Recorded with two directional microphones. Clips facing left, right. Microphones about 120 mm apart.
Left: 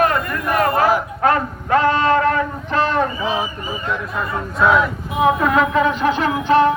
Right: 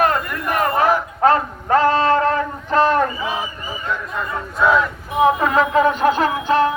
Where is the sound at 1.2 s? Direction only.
35° right (ahead or behind).